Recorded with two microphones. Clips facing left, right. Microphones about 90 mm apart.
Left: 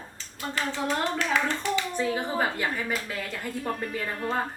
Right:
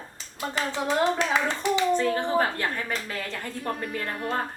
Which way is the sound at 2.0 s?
10° left (ahead or behind).